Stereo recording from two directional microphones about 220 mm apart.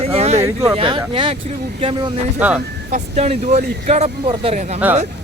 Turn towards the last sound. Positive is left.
turn(degrees=-30)  # may be behind; listen again after turning